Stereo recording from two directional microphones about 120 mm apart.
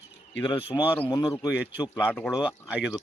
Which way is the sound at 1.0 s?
30° left (ahead or behind).